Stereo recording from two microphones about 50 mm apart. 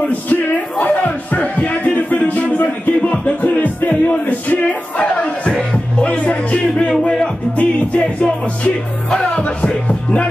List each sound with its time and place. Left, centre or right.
0.3 s music: left
6.9 s music: centre
7.5 s music: left